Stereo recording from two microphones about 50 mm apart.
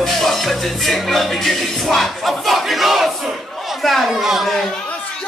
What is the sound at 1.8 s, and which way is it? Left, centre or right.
Battle cry, centre.